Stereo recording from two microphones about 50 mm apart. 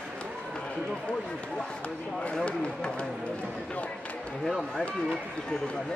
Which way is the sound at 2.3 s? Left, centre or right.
Centre.